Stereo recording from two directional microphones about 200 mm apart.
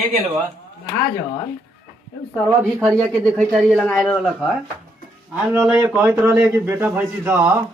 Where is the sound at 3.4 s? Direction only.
Centre (ahead or behind).